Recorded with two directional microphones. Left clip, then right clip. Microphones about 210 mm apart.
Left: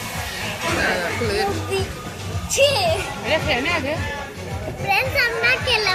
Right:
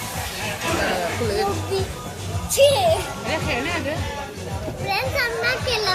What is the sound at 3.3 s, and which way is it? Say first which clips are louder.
Music: left 4 dB; 40° left (ahead or behind).